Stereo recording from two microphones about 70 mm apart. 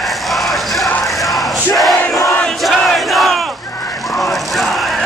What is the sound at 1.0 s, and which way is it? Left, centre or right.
Crowd, centre.